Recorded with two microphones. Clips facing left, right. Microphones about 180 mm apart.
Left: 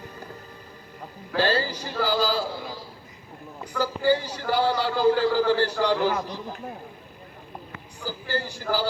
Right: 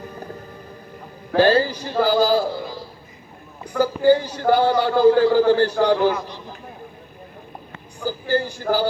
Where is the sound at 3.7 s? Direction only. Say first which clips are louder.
Right 7 dB; 50° right (ahead or behind).